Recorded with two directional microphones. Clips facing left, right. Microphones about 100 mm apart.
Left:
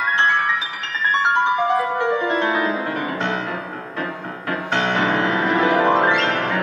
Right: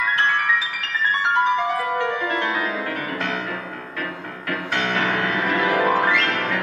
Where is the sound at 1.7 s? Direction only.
20° left (ahead or behind).